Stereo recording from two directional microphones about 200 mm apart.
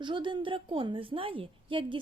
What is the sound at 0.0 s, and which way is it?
A woman's voice, 25° right (ahead or behind).